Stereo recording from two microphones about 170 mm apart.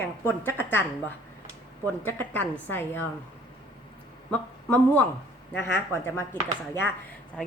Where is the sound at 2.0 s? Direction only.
10° left (ahead or behind).